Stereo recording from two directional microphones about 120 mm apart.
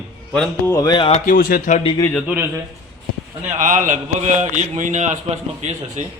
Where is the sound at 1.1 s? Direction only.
90° left.